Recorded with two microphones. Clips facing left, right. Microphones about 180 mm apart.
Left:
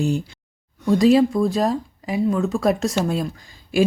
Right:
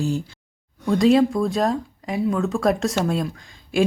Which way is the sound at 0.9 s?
5° left (ahead or behind).